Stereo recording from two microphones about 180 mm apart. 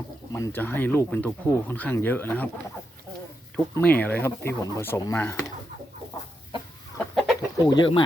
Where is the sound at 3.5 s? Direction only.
10° left (ahead or behind).